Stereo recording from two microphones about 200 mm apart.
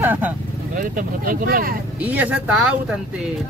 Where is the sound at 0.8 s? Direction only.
45° right (ahead or behind).